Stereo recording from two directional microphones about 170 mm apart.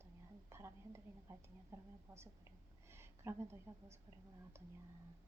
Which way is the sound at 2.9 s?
15° right (ahead or behind).